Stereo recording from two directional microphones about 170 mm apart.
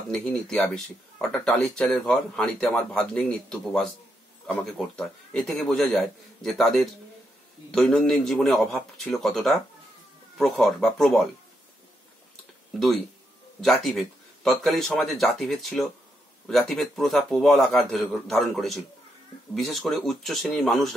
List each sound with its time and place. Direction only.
0.1 s speech: 5° left (ahead or behind)
13.6 s speech: centre (ahead or behind)